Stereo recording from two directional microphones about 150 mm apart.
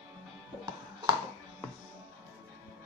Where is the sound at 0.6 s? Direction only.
30° right (ahead or behind).